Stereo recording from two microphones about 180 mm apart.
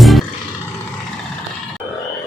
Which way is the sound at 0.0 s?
Centre (ahead or behind).